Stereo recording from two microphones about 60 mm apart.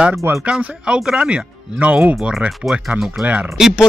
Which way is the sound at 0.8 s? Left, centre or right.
Centre.